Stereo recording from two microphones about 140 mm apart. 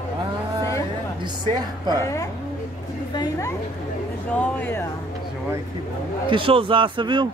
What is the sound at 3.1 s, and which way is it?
A woman's voice, 25° left (ahead or behind).